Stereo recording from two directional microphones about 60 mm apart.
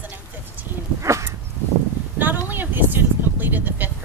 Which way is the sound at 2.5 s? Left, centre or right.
Right.